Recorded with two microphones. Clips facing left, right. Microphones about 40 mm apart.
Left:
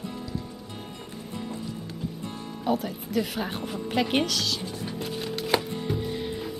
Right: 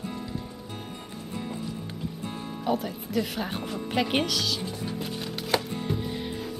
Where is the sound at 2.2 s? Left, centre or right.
Right.